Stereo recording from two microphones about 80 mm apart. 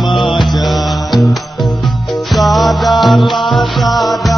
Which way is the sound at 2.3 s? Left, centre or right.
Centre.